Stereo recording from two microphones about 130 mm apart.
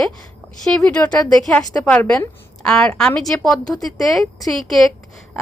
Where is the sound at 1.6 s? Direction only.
30° left (ahead or behind).